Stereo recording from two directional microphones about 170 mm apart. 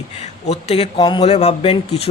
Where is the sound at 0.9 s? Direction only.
25° left (ahead or behind).